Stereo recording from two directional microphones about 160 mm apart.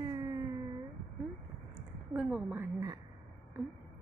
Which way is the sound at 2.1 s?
5° right (ahead or behind).